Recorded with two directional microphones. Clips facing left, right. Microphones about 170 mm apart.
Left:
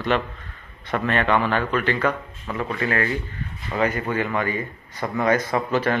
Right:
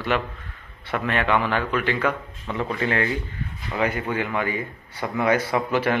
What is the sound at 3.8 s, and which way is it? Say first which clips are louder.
A man's voice: left 2 dB; 10° right (ahead or behind).